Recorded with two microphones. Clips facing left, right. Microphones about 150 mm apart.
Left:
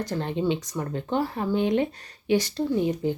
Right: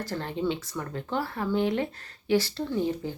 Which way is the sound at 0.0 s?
20° left (ahead or behind).